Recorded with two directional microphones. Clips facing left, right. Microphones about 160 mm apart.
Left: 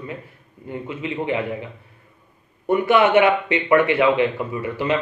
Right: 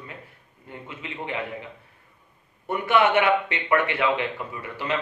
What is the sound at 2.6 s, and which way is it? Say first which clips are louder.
Speech: left 5 dB; 10° left (ahead or behind).